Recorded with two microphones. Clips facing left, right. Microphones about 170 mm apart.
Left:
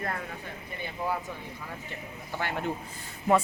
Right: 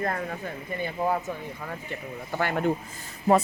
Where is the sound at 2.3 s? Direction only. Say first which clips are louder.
Right 6 dB; 50° right (ahead or behind).